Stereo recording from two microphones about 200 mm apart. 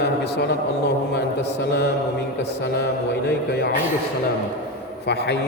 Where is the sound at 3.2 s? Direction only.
55° left (ahead or behind).